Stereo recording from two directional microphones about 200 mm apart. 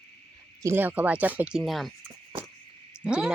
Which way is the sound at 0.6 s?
10° right (ahead or behind).